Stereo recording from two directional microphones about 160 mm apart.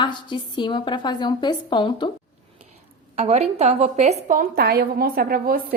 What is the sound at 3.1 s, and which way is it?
A woman's voice, 45° right (ahead or behind).